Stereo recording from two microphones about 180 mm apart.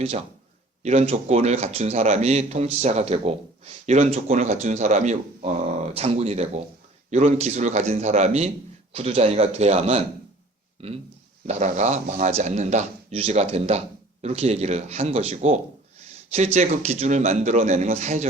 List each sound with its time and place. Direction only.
0.8 s speech: 35° right (ahead or behind)